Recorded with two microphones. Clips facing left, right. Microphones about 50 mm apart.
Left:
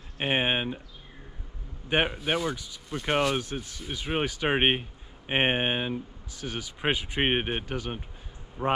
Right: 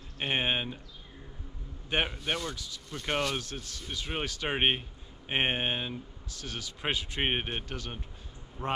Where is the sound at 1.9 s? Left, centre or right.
Centre.